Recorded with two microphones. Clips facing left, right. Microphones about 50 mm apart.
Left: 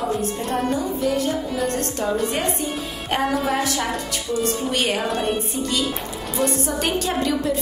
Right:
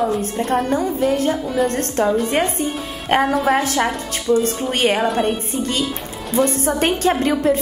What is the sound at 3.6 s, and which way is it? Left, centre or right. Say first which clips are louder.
A woman's voice: right 4 dB; right.